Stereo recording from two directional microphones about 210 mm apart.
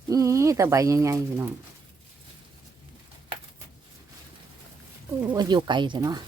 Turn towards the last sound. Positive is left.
turn(degrees=-20)  # may be behind; listen again after turning